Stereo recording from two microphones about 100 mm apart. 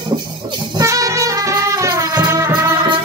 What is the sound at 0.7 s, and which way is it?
Music, 35° right (ahead or behind).